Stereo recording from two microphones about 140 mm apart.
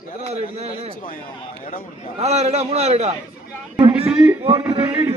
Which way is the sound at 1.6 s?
85° left.